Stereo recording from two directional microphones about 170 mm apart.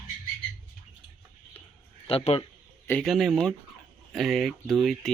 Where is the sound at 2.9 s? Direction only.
10° left (ahead or behind).